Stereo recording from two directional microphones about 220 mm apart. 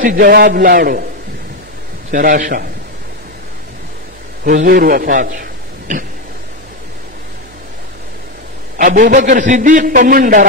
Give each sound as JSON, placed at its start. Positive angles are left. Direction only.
{"t": 0.0, "sound": "a man's voice", "side_deg": -40}
{"t": 2.0, "sound": "a man's voice", "side_deg": -40}
{"t": 4.5, "sound": "a man's voice", "side_deg": -40}
{"t": 8.7, "sound": "a man's voice", "side_deg": -35}